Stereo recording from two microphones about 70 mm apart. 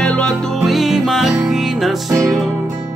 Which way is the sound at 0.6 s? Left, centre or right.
Centre.